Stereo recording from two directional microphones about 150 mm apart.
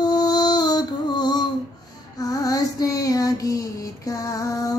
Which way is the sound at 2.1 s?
25° left (ahead or behind).